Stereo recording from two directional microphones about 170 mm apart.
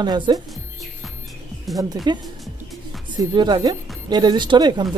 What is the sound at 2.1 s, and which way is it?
Speech, 25° right (ahead or behind).